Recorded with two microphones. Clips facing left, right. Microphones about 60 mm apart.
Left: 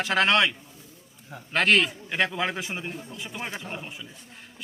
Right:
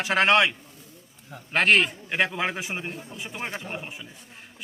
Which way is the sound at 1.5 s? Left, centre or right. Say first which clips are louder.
Right 1 dB; centre.